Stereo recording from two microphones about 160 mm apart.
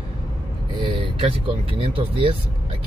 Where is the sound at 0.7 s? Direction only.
30° right (ahead or behind).